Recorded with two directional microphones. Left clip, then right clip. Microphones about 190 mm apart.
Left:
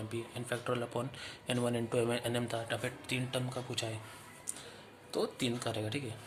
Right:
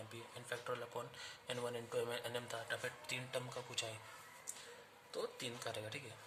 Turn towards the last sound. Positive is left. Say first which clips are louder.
# left 8 dB
turn(degrees=10)  # may be behind; listen again after turning